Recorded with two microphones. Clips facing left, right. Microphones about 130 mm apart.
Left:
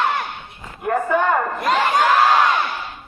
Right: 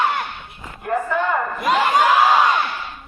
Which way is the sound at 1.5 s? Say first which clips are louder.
Right 1 dB; 5° right (ahead or behind).